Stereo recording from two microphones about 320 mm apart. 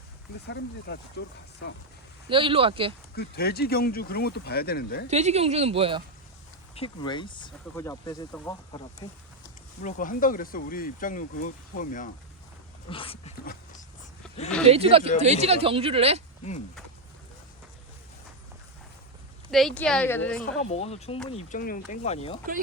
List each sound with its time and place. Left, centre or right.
0.4 s speech: left
2.3 s speech: centre
3.2 s speech: left
5.0 s speech: right
6.7 s speech: centre
9.8 s speech: left
14.7 s speech: centre
19.5 s a woman's voice: centre
20.7 s speech: centre